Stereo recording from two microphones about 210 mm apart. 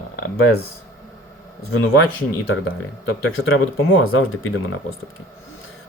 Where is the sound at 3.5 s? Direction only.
75° left (ahead or behind).